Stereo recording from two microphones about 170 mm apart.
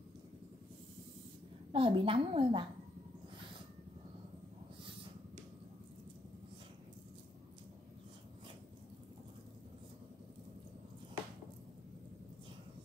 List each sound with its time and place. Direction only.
1.7 s a woman's voice: 30° right (ahead or behind)